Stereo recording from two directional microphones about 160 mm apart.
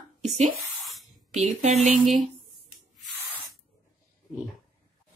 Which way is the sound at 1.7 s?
Centre (ahead or behind).